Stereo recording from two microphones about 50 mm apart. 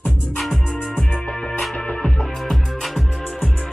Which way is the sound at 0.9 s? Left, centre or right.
Centre.